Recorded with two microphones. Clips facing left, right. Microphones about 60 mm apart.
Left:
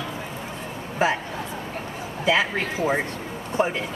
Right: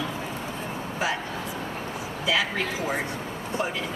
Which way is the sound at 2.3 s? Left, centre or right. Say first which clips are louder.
Left 4 dB; left.